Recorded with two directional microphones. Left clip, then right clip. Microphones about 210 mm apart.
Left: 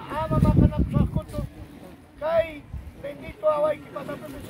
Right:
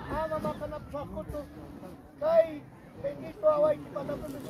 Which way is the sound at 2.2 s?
Centre (ahead or behind).